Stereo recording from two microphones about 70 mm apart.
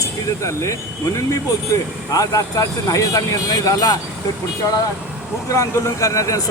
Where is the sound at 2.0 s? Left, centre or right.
Left.